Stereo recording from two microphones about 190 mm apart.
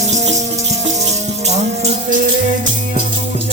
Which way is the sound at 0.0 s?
35° right (ahead or behind).